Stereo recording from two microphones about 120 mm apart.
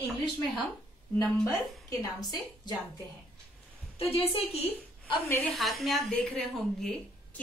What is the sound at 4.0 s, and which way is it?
Speech, 55° left (ahead or behind).